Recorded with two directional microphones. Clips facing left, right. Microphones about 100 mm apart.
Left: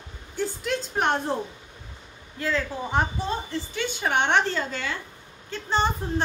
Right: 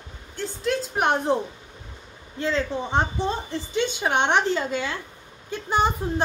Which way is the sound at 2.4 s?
25° right (ahead or behind).